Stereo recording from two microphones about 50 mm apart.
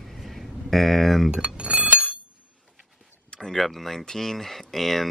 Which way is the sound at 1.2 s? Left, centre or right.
Centre.